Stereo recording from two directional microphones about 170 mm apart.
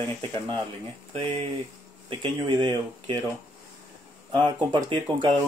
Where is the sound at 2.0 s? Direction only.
30° right (ahead or behind).